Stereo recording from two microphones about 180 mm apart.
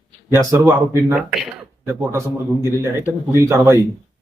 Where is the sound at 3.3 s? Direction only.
15° right (ahead or behind).